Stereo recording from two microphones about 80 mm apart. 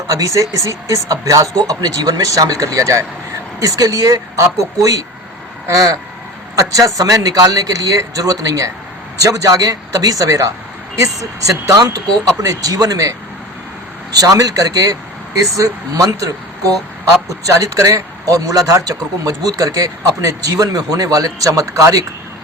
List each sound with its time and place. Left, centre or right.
0.1 s speech: right